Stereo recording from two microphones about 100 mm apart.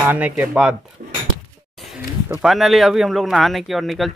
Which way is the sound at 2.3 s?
Centre (ahead or behind).